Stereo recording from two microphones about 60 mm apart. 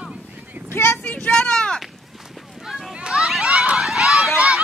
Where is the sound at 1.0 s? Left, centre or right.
Left.